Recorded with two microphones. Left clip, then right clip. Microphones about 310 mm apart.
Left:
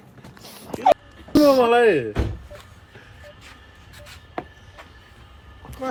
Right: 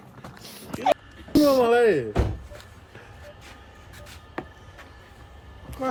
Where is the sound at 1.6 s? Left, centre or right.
Left.